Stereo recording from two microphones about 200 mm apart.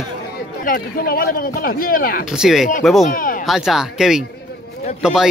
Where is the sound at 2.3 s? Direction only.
Centre (ahead or behind).